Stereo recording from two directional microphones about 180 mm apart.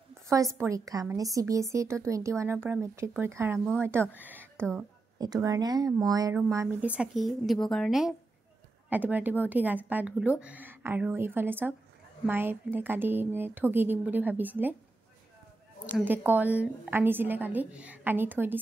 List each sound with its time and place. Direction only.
0.1 s a woman's voice: 15° right (ahead or behind)
3.5 s speech: 5° left (ahead or behind)
4.2 s a sound: 10° right (ahead or behind)
4.6 s a woman's voice: 5° left (ahead or behind)
5.2 s a woman's voice: 20° right (ahead or behind)
15.9 s a woman's voice: 10° right (ahead or behind)